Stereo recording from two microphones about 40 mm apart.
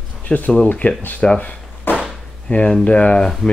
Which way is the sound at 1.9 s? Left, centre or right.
Left.